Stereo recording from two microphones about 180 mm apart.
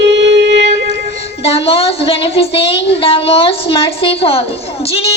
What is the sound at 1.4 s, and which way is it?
Child singing, 35° left (ahead or behind).